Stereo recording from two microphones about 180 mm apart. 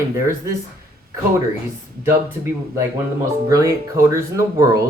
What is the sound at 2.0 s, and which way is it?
Speech, 15° right (ahead or behind).